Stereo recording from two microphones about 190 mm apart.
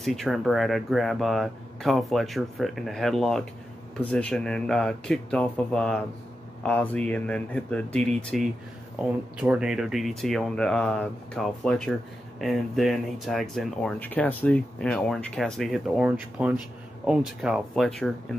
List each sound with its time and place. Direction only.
0.0 s speech: centre (ahead or behind)